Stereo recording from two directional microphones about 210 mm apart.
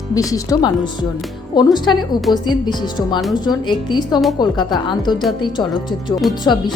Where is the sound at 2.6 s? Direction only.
20° left (ahead or behind).